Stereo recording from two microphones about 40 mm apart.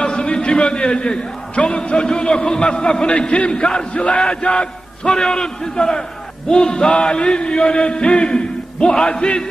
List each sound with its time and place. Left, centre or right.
0.0 s a man's voice: left